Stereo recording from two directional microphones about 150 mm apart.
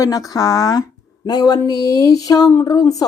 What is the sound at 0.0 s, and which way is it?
A woman's voice, 25° left (ahead or behind).